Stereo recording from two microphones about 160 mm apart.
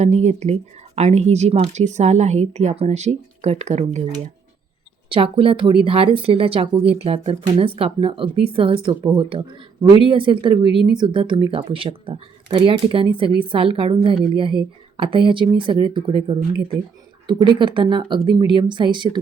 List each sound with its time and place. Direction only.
0.0 s speech: 45° right (ahead or behind)
5.1 s a woman's voice: 35° right (ahead or behind)